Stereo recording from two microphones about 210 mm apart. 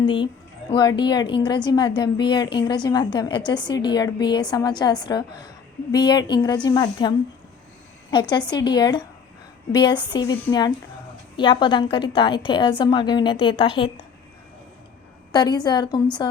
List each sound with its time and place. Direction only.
0.0 s a woman's voice: 25° left (ahead or behind)
8.1 s a woman's voice: 20° left (ahead or behind)
11.3 s a woman's voice: 20° left (ahead or behind)
15.3 s a woman's voice: 20° left (ahead or behind)